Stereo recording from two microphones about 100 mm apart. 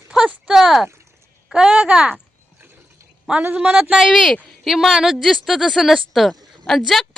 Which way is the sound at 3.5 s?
10° right (ahead or behind).